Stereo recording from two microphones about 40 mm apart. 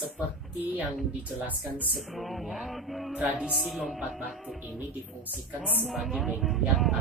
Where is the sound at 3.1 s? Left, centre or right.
Right.